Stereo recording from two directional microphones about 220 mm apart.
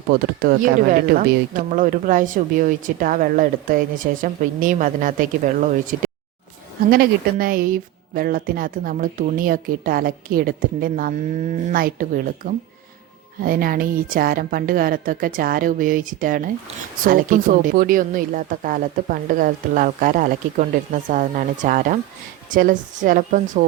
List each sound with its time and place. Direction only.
0.1 s speech: 40° right (ahead or behind)